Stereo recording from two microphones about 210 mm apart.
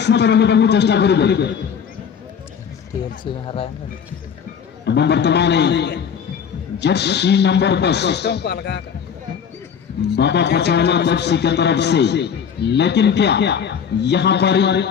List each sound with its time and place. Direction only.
0.0 s a man's voice: 55° left (ahead or behind)
3.4 s speech: 25° left (ahead or behind)
4.9 s a man's voice: 55° left (ahead or behind)
10.1 s a man's voice: 55° left (ahead or behind)